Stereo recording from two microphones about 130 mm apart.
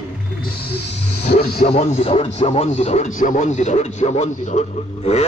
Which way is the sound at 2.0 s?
50° left (ahead or behind).